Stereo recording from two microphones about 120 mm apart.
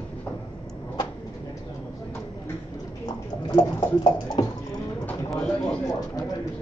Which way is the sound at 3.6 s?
35° left (ahead or behind).